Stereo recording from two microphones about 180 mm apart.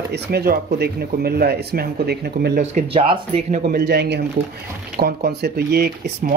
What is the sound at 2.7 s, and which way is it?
Speech, 30° right (ahead or behind).